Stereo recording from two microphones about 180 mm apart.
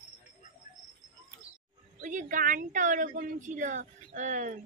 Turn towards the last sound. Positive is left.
turn(degrees=-45)  # may be behind; listen again after turning